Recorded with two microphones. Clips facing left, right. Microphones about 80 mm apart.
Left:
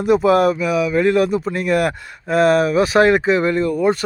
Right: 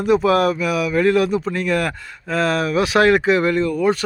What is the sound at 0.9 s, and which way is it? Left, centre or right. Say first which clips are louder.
Speech: right 1 dB; centre.